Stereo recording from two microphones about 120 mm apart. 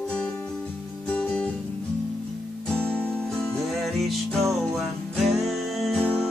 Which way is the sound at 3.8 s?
Centre (ahead or behind).